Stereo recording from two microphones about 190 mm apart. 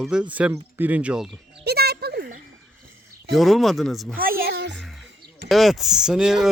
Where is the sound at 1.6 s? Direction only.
55° right (ahead or behind).